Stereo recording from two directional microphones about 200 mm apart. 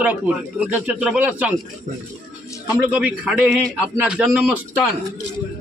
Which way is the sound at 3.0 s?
5° right (ahead or behind).